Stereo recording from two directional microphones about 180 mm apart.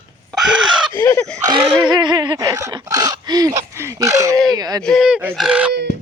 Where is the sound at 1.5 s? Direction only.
30° right (ahead or behind).